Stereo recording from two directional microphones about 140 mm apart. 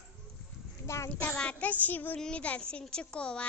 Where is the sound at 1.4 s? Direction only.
5° left (ahead or behind).